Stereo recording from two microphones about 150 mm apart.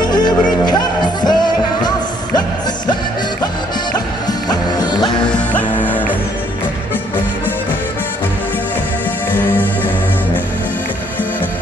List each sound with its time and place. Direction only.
0.0 s music: 30° left (ahead or behind)
3.9 s music: 25° left (ahead or behind)
5.2 s music: 10° left (ahead or behind)
9.3 s music: 10° left (ahead or behind)